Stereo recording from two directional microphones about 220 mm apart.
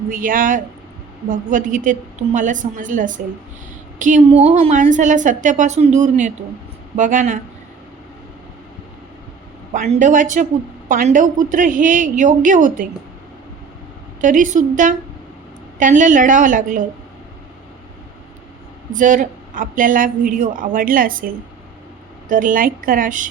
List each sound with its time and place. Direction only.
0.1 s a woman's voice: 40° right (ahead or behind)
9.7 s a woman's voice: 35° right (ahead or behind)
14.2 s a woman's voice: 35° right (ahead or behind)
18.9 s a woman's voice: 35° right (ahead or behind)